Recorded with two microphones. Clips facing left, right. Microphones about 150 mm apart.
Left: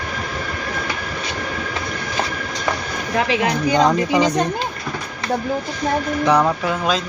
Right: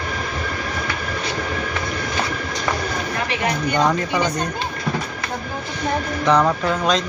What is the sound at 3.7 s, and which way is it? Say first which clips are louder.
Speech: left 4 dB; 20° left (ahead or behind).